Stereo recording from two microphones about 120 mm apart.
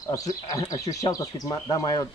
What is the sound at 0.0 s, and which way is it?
Speech, 30° left (ahead or behind).